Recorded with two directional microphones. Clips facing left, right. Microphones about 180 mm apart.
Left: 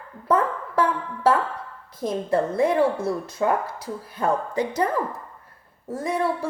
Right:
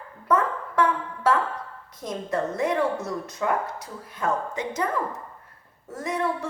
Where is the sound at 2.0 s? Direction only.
30° left (ahead or behind).